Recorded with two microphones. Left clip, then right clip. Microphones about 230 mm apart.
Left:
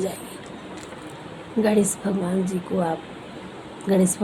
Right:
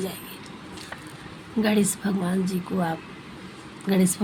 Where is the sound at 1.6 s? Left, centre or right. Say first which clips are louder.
Left 3 dB; right.